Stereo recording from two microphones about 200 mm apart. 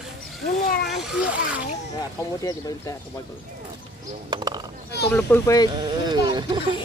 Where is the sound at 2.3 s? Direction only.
20° left (ahead or behind).